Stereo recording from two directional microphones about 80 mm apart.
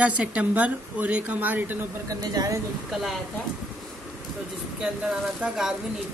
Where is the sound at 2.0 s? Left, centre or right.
Right.